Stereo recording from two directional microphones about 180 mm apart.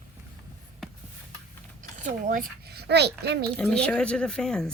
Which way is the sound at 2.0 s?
50° right (ahead or behind).